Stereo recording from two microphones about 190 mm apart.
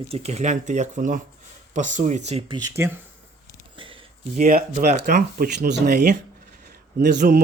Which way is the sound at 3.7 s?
25° right (ahead or behind).